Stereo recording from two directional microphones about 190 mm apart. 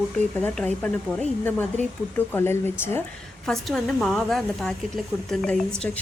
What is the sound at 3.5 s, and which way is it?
A woman's voice, centre (ahead or behind).